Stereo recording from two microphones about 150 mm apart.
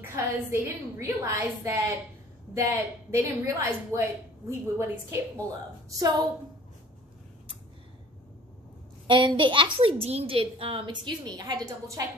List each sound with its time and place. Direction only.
0.1 s a woman's voice: 20° right (ahead or behind)
9.0 s a woman's voice: 30° right (ahead or behind)